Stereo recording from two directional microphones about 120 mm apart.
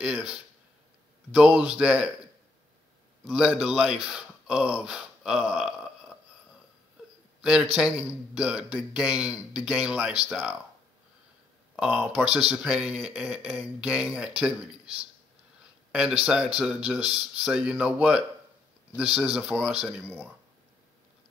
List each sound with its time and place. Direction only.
0.0 s speech: 10° right (ahead or behind)
3.3 s speech: 5° right (ahead or behind)
7.7 s speech: 5° right (ahead or behind)
11.7 s speech: 5° right (ahead or behind)
15.9 s speech: 5° right (ahead or behind)